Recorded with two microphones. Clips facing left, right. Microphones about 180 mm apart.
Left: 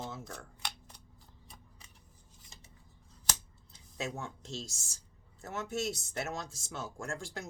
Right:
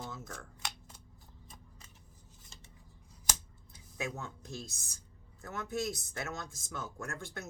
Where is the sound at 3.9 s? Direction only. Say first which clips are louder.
Left 1 dB; 25° left (ahead or behind).